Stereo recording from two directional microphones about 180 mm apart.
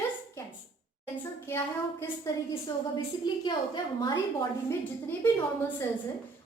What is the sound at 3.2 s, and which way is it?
Speech, 25° left (ahead or behind).